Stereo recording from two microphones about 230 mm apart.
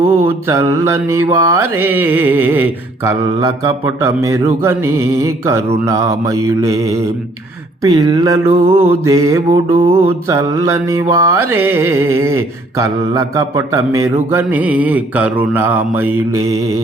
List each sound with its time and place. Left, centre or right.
0.4 s mantra: centre
8.5 s music: right
9.0 s mantra: centre
9.5 s music: right
10.2 s mantra: centre